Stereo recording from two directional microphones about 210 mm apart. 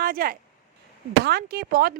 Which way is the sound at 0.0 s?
45° right (ahead or behind).